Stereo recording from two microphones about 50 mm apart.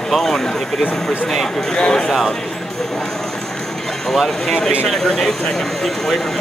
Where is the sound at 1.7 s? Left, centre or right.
Centre.